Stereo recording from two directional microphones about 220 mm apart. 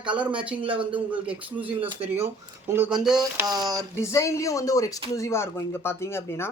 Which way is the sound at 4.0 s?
15° left (ahead or behind).